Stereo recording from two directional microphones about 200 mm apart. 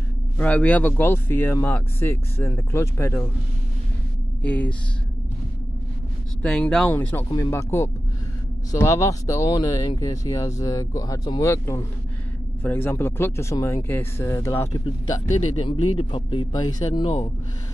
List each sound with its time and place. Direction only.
0.4 s speech: 5° left (ahead or behind)
4.4 s speech: 5° left (ahead or behind)
6.4 s speech: 5° left (ahead or behind); by 17.3 s 25° left (ahead or behind)